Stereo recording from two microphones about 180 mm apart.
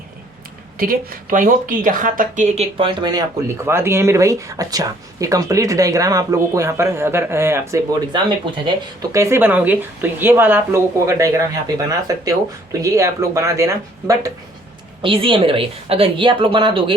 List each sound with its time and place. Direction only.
0.8 s speech: 55° right (ahead or behind)
2.7 s a woman's voice: 25° right (ahead or behind)
15.0 s a woman's voice: 30° right (ahead or behind)